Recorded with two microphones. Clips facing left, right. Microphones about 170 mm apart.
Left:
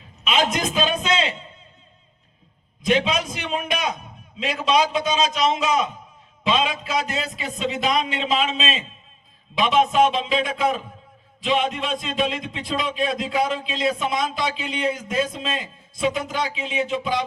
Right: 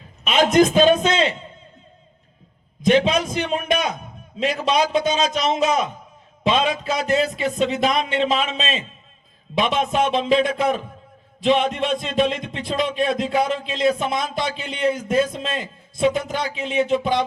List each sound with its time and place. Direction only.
0.3 s speech: 50° right (ahead or behind)
2.8 s a sound: 50° right (ahead or behind)
4.4 s speech: 50° right (ahead or behind)